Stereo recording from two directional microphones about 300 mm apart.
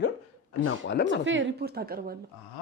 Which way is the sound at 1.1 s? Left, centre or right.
Right.